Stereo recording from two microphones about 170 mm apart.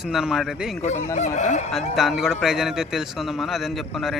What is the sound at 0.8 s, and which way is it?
Speech, 45° left (ahead or behind).